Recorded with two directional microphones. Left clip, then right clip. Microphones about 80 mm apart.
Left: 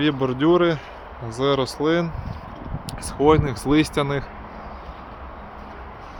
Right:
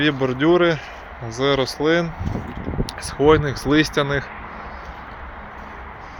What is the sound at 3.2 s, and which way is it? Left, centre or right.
Speech, left.